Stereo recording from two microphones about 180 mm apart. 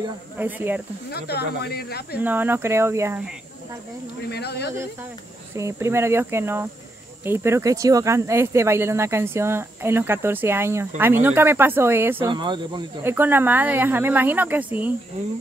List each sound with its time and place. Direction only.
0.4 s speech: 10° right (ahead or behind)
1.1 s speech: 65° left (ahead or behind)
2.1 s speech: 10° right (ahead or behind)
4.3 s speech: 65° left (ahead or behind)
5.6 s speech: 15° right (ahead or behind)
12.3 s speech: 25° right (ahead or behind)
13.0 s speech: 10° right (ahead or behind)